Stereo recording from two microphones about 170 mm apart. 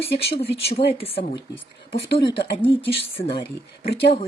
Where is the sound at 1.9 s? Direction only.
80° left.